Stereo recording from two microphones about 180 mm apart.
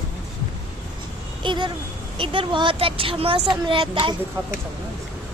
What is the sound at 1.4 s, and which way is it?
A woman's voice, 25° right (ahead or behind).